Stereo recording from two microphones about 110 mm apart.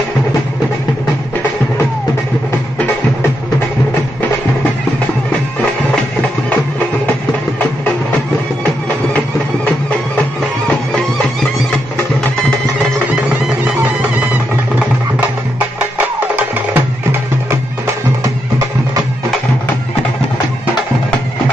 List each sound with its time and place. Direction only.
16.2 s music: 15° right (ahead or behind)